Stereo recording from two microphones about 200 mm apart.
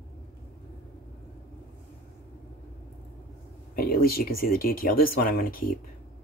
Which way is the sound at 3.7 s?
50° left (ahead or behind).